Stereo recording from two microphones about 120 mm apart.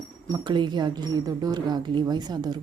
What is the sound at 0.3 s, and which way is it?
Speech, 35° right (ahead or behind).